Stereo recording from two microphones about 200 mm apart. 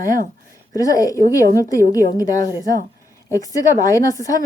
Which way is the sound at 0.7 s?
15° left (ahead or behind).